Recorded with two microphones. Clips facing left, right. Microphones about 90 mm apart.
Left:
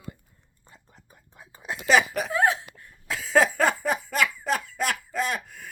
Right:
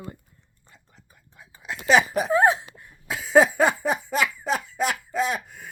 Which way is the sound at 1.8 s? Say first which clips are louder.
Right 2 dB; 20° right (ahead or behind).